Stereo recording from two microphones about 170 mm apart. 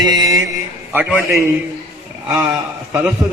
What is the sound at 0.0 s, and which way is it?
Mantra, 25° right (ahead or behind).